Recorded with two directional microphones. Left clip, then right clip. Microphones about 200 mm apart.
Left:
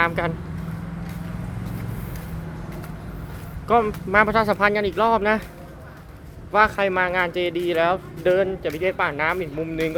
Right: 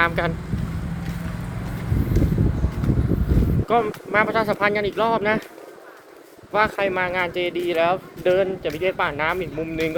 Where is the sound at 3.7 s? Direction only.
20° left (ahead or behind).